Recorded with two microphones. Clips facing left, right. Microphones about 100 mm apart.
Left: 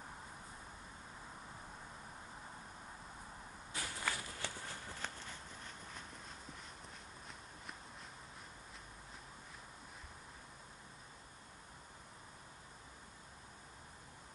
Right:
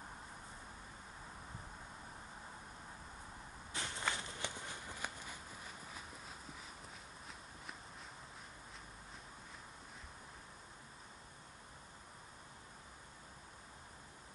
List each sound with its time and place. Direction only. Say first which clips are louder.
3.7 s walk: right 1 dB; 25° right (ahead or behind); by 6.3 s 5° right (ahead or behind)